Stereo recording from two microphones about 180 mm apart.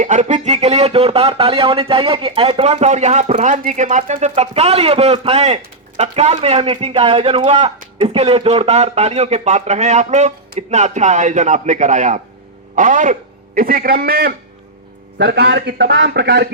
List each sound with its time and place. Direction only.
0.0 s a man's voice: 45° right (ahead or behind)
15.2 s a man's voice: 70° right (ahead or behind)